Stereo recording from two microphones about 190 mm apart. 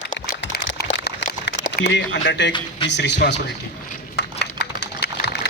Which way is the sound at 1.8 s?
70° left (ahead or behind).